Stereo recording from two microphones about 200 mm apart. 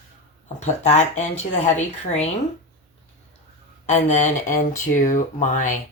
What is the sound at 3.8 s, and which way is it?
Speech, 35° left (ahead or behind).